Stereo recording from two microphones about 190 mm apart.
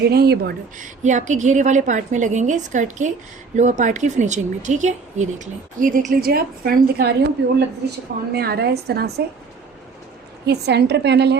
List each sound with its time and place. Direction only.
0.0 s a woman's voice: 55° right (ahead or behind)
10.4 s a woman's voice: 60° right (ahead or behind)